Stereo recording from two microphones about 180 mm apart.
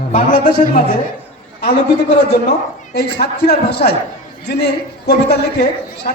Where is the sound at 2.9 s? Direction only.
65° left (ahead or behind).